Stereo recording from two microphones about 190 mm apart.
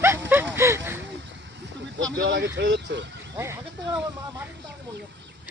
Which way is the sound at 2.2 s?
65° right (ahead or behind).